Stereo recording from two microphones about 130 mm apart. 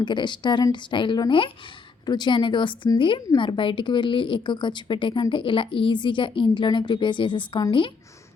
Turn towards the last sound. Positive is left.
turn(degrees=40)  # may be behind; listen again after turning